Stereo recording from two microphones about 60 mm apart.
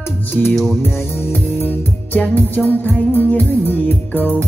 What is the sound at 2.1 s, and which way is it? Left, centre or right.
Music, left.